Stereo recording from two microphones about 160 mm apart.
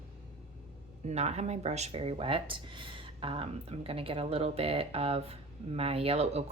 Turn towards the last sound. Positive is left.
turn(degrees=-40)  # may be behind; listen again after turning